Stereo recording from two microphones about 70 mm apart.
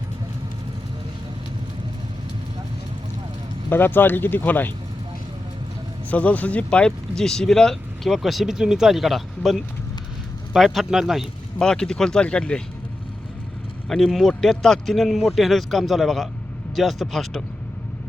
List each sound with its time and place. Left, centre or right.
3.7 s speech: left
6.1 s speech: left; by 11.3 s centre
11.6 s speech: centre
13.8 s speech: centre